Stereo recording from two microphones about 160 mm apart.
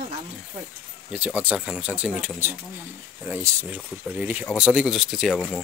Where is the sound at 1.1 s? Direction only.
10° right (ahead or behind).